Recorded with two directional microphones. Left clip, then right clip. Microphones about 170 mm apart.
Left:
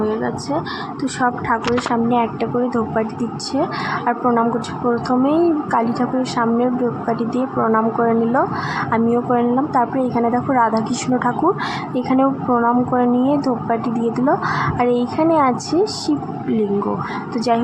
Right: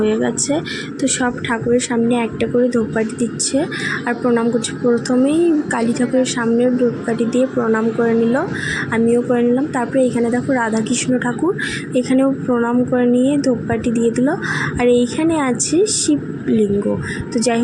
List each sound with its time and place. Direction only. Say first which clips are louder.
0.0 s a woman's voice: right 3 dB; 35° right (ahead or behind)